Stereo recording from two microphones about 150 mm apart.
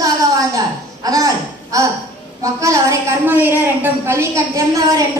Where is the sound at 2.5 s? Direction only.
20° right (ahead or behind).